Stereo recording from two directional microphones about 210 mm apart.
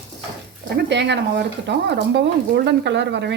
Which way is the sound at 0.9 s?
55° right (ahead or behind).